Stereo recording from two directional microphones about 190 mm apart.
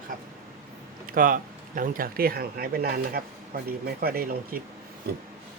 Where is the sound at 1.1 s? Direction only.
45° right (ahead or behind).